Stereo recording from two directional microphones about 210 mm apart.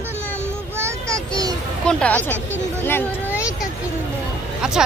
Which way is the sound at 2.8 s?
10° left (ahead or behind).